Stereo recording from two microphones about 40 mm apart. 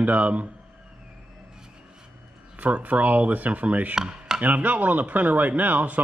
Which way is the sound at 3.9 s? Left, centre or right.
Centre.